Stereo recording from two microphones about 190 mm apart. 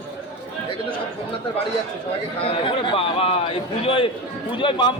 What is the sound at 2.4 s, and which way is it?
A man's voice, 25° left (ahead or behind).